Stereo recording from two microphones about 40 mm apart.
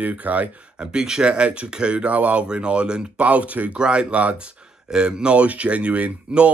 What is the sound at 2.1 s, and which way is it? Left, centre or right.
Speech, right.